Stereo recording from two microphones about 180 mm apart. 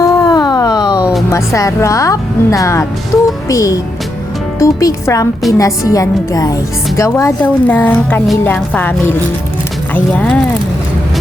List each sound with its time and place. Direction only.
0.0 s a sound: 20° left (ahead or behind)
0.9 s music: 5° right (ahead or behind)
1.3 s a woman's voice: 15° left (ahead or behind)